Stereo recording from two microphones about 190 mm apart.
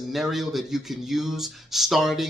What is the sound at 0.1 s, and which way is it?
A man's voice, centre (ahead or behind).